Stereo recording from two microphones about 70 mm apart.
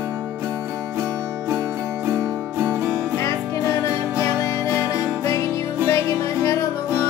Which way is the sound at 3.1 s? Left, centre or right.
Left.